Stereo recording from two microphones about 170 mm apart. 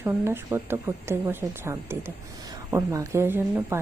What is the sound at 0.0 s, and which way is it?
Speech, 15° right (ahead or behind).